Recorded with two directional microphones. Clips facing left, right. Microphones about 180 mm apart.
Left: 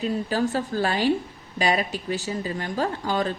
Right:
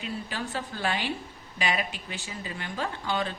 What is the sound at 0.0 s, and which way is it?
Speech, 40° left (ahead or behind).